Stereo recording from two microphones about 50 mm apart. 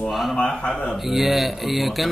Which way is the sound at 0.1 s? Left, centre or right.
Centre.